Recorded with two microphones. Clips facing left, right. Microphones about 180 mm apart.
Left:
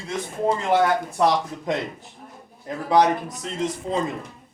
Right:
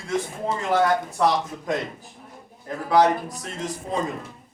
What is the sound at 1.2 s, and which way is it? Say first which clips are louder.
Speech: left 2 dB; 20° left (ahead or behind).